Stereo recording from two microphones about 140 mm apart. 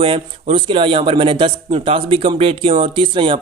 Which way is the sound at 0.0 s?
40° right (ahead or behind).